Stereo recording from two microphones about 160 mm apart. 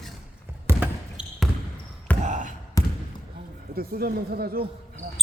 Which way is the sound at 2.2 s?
50° right (ahead or behind).